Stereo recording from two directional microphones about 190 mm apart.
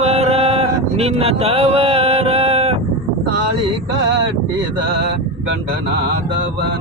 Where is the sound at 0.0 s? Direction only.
35° right (ahead or behind).